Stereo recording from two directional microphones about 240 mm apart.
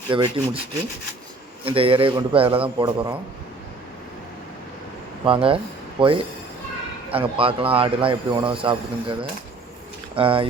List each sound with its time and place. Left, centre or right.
0.1 s a man's voice: centre
1.6 s a man's voice: right
5.2 s a man's voice: right